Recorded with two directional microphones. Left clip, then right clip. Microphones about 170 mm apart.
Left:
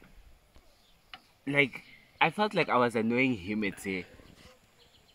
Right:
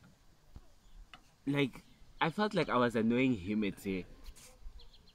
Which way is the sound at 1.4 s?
45° left (ahead or behind).